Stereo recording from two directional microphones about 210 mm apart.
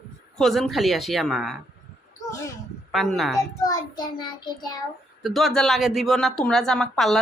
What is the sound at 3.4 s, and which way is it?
A child's voice, 15° left (ahead or behind).